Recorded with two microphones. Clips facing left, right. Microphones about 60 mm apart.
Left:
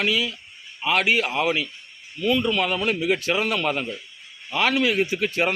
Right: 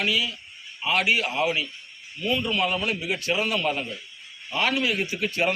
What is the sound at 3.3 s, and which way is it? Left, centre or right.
A man's voice, left.